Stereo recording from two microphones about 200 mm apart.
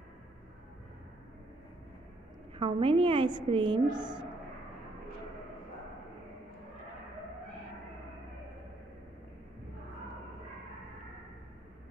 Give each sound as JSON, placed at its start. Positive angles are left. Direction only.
{"t": 2.6, "sound": "a woman's voice", "side_deg": -25}